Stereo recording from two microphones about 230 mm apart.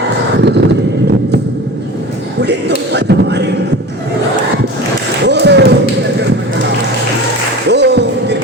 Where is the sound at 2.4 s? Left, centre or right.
Right.